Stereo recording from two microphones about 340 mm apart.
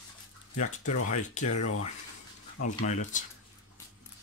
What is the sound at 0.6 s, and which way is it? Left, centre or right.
Speech, left.